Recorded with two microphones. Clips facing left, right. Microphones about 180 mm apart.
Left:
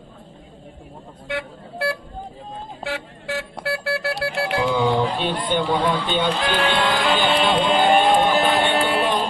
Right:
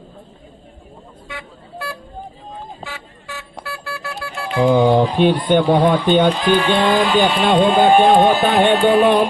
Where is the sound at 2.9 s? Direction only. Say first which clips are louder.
Left 6 dB; 70° left (ahead or behind).